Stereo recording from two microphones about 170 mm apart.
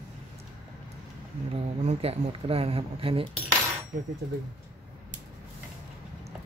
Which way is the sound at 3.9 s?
60° right (ahead or behind).